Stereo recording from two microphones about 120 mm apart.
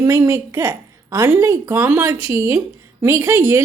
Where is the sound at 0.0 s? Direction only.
25° right (ahead or behind).